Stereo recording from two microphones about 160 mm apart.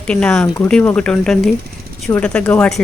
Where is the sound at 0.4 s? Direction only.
20° left (ahead or behind).